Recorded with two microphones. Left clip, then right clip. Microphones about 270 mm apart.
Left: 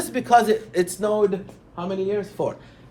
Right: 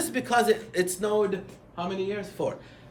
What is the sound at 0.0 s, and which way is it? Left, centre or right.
A man's voice, centre.